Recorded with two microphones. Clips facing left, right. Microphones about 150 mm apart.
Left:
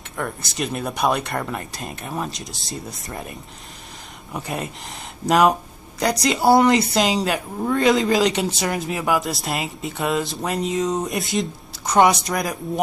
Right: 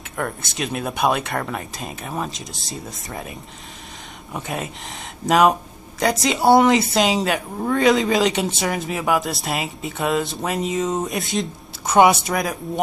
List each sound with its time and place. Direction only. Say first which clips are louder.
0.2 s speech: even; centre (ahead or behind)